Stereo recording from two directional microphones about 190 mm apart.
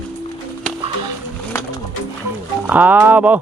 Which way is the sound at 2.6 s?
10° right (ahead or behind).